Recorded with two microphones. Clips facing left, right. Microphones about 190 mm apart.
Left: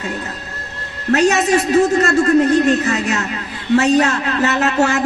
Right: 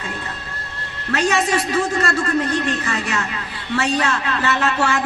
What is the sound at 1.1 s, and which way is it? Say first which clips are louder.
A man's voice: left 5 dB; 40° left (ahead or behind).